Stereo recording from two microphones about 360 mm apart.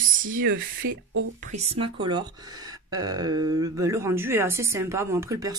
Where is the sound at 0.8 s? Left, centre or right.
Right.